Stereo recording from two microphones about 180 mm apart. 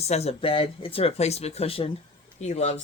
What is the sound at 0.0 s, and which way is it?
Speech, 35° left (ahead or behind).